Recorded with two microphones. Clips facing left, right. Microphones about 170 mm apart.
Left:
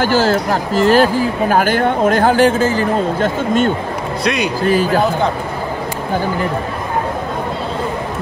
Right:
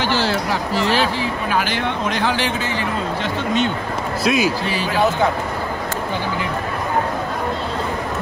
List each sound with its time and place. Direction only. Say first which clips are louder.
0.0 s speech: left 6 dB; 45° left (ahead or behind)
4.2 s a man's voice: even; centre (ahead or behind)
4.6 s speech: left 7 dB; 50° left (ahead or behind)